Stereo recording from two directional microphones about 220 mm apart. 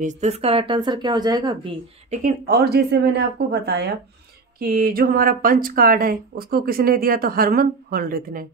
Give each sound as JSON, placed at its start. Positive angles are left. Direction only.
{"t": 0.0, "sound": "speech", "side_deg": -30}
{"t": 2.2, "sound": "speech", "side_deg": -45}